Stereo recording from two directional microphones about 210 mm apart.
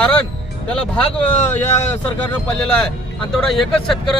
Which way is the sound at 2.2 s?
5° left (ahead or behind).